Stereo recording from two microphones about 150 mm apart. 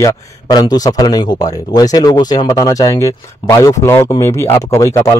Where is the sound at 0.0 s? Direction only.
25° left (ahead or behind).